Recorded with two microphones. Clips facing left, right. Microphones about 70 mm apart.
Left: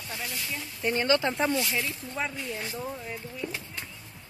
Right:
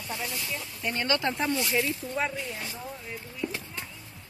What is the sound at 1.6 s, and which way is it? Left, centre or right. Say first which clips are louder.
Speech: right 3 dB; centre.